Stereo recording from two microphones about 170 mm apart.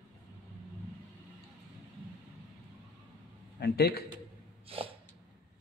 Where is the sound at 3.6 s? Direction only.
70° left (ahead or behind).